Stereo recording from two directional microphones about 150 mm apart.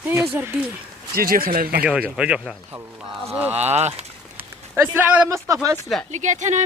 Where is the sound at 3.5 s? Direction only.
45° right (ahead or behind).